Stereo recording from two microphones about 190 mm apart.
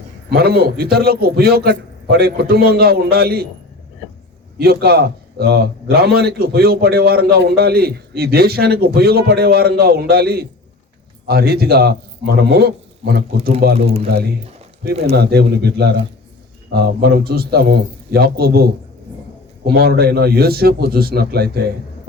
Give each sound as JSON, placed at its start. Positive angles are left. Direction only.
{"t": 0.3, "sound": "a man's voice", "side_deg": -55}
{"t": 4.5, "sound": "a man's voice", "side_deg": -55}
{"t": 13.7, "sound": "a man's voice", "side_deg": -30}
{"t": 14.1, "sound": "a man's voice", "side_deg": -55}